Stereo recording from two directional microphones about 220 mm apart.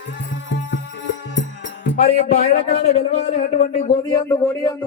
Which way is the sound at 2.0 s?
30° left (ahead or behind).